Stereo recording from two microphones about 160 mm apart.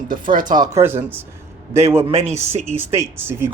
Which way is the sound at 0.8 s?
15° right (ahead or behind).